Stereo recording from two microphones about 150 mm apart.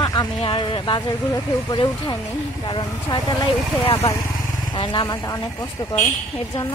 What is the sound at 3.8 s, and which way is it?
Speech, 40° left (ahead or behind).